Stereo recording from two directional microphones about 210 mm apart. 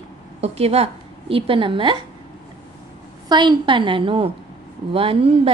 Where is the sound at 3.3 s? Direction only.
20° right (ahead or behind).